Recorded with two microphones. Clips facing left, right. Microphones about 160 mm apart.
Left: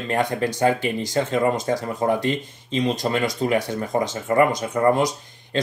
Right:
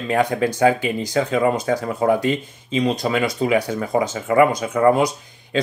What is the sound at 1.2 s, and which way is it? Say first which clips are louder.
Speech: right 2 dB; centre (ahead or behind).